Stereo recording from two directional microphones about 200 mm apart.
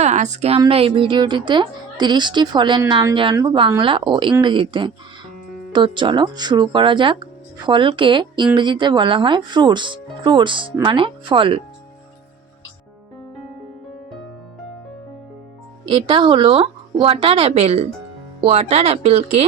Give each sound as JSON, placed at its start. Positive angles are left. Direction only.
{"t": 0.0, "sound": "a woman's voice", "side_deg": -35}
{"t": 15.9, "sound": "speech", "side_deg": -25}